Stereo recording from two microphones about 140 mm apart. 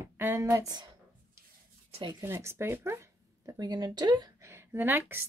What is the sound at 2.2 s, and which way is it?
Speech, 20° right (ahead or behind).